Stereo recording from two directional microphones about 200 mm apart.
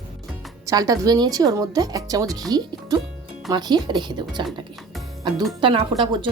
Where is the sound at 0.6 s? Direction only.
15° right (ahead or behind).